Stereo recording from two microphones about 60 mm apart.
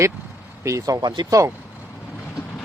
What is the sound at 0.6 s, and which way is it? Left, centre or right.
Speech, right.